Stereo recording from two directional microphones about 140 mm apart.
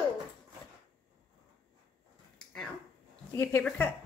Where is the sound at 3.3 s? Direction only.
15° left (ahead or behind).